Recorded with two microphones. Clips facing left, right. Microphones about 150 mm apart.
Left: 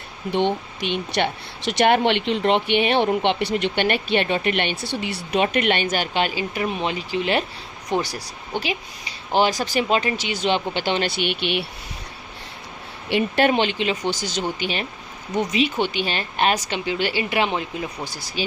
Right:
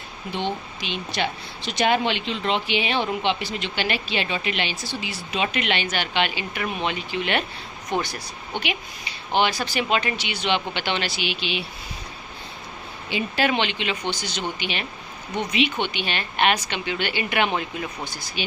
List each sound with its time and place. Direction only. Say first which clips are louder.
0.3 s a woman's voice: left 6 dB; 60° left (ahead or behind); by 8.1 s 30° left (ahead or behind)
9.3 s speech: left 3 dB; 40° left (ahead or behind)
11.1 s a woman's voice: left 4 dB; 55° left (ahead or behind)
13.1 s a woman's voice: left 5 dB; 60° left (ahead or behind)
13.5 s speech: left 4 dB; 40° left (ahead or behind)